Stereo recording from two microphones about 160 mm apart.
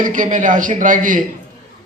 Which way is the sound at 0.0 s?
55° right (ahead or behind).